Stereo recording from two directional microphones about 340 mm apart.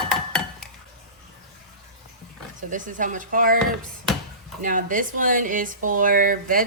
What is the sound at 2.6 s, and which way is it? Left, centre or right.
Speech, right.